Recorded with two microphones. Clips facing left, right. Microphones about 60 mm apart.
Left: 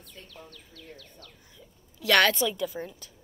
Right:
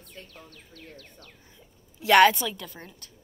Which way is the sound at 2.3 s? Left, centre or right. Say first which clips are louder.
Left 5 dB; centre.